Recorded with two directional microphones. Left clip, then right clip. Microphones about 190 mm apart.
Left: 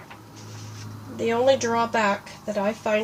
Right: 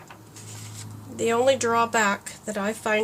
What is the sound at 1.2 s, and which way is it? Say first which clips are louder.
Speech: left 1 dB; 15° right (ahead or behind).